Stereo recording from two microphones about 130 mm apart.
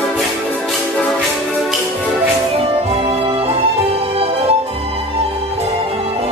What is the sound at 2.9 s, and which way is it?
Music, 50° right (ahead or behind).